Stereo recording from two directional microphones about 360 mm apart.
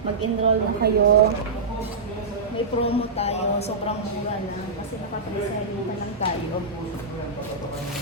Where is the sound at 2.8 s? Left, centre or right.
Centre.